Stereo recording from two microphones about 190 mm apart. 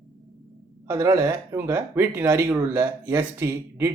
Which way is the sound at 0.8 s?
20° right (ahead or behind).